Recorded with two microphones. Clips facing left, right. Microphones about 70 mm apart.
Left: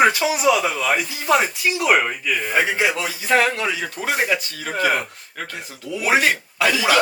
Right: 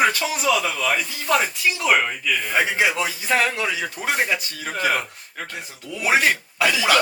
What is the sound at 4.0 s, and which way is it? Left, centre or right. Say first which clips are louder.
Speech: left 2 dB; left.